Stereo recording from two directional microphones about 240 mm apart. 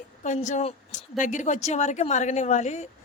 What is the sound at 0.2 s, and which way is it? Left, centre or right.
A woman's voice, left.